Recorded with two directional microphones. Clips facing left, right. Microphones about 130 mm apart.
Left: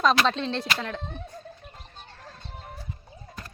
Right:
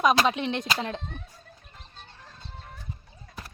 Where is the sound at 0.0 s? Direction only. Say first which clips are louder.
Even; 15° right (ahead or behind).